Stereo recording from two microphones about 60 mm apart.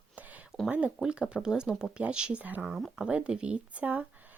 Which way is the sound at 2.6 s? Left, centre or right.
Centre.